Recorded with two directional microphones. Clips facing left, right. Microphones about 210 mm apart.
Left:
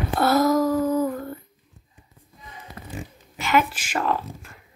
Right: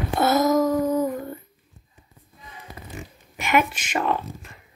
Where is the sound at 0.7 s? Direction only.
10° right (ahead or behind).